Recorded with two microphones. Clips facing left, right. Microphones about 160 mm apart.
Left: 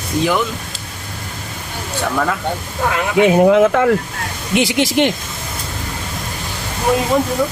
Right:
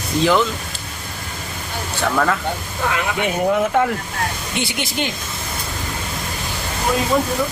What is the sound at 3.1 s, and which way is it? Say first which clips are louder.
Speech: left 10 dB; 90° left.